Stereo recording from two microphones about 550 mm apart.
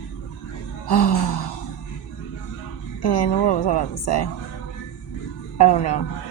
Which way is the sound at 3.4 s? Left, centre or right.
Left.